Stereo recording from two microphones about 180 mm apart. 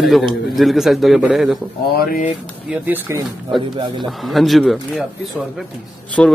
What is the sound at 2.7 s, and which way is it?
Speech, 10° right (ahead or behind).